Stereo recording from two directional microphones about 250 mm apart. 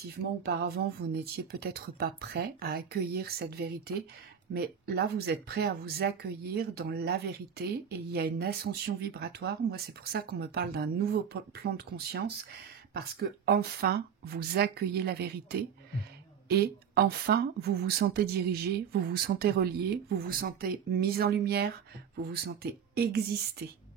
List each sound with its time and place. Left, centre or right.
0.5 s speech: right